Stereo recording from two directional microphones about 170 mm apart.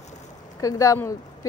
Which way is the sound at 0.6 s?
20° left (ahead or behind).